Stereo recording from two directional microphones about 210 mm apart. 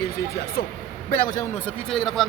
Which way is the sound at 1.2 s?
15° left (ahead or behind).